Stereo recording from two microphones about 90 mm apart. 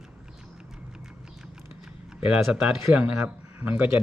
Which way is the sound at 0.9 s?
5° right (ahead or behind).